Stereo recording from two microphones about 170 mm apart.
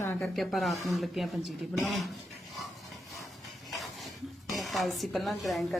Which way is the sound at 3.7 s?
Centre (ahead or behind).